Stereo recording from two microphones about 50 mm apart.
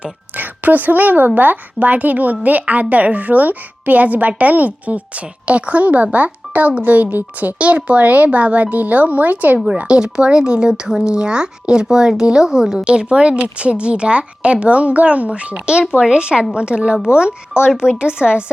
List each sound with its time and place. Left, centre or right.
0.3 s a woman's voice: right
9.8 s speech: centre